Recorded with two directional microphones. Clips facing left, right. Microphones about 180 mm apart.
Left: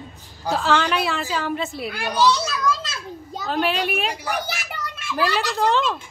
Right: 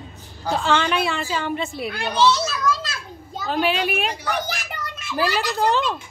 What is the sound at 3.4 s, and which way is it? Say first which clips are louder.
Speech: right 1 dB; centre (ahead or behind).